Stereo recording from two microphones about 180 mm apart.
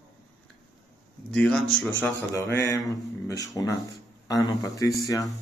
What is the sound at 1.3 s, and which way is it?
Speech, 5° left (ahead or behind).